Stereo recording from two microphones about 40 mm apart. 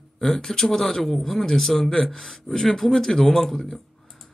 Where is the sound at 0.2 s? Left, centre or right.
Centre.